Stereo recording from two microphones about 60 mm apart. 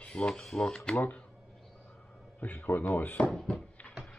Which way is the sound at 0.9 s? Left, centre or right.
Left.